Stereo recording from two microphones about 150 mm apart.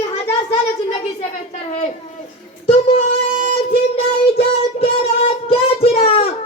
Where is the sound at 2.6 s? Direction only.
40° left (ahead or behind).